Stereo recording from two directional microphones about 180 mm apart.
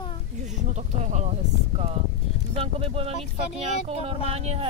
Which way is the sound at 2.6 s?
30° right (ahead or behind).